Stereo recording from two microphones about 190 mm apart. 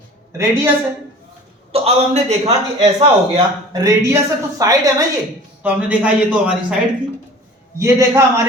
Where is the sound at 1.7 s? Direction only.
35° right (ahead or behind).